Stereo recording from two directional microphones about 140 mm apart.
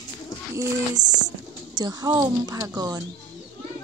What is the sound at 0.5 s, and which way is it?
Speech, 20° right (ahead or behind).